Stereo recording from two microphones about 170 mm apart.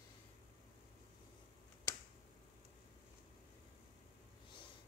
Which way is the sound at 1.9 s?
20° left (ahead or behind).